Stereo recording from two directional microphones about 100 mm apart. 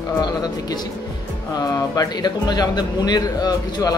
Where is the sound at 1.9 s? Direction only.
40° left (ahead or behind).